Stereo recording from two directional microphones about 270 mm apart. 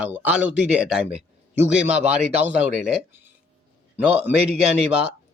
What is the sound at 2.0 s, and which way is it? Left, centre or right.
Speech, right.